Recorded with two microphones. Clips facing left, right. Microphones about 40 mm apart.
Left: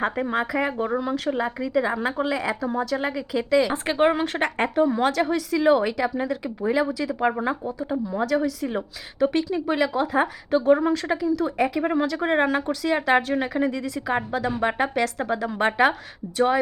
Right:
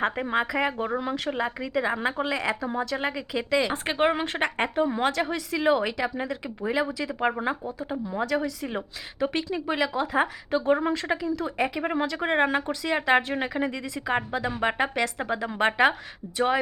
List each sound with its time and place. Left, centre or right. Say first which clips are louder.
0.0 s speech: left 1 dB; centre
2.6 s speech: left 3 dB; centre